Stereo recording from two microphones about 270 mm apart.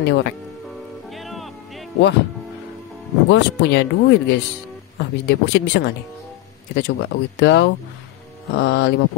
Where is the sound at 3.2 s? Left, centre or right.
Left.